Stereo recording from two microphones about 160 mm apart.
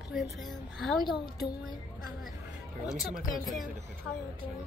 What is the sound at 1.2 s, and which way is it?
Speech, 25° left (ahead or behind).